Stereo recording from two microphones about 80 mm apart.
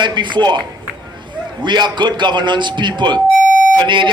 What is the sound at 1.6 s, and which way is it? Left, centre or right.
Speech, right.